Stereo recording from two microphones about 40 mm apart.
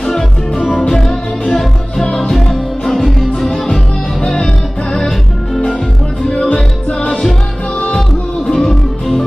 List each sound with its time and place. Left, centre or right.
0.0 s music: centre
4.2 s music: centre
6.2 s music: centre
8.5 s music: centre